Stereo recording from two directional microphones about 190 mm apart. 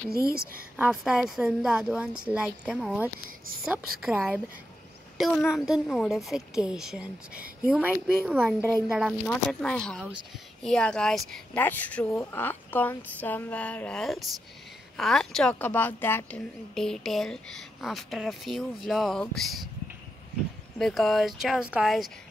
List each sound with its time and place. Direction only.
0.1 s a woman's voice: 50° right (ahead or behind)
0.7 s a woman's voice: 5° right (ahead or behind)
5.1 s a sound: centre (ahead or behind)
5.5 s a woman's voice: centre (ahead or behind)
8.6 s a woman's voice: 15° left (ahead or behind)
20.8 s a woman's voice: centre (ahead or behind)